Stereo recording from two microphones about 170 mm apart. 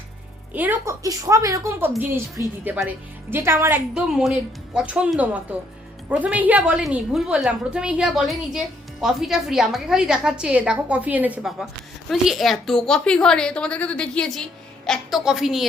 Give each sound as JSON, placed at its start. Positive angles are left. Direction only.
{"t": 0.5, "sound": "a woman's voice", "side_deg": -10}